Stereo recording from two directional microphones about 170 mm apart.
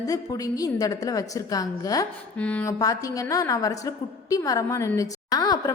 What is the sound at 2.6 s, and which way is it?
A woman's voice, 20° left (ahead or behind).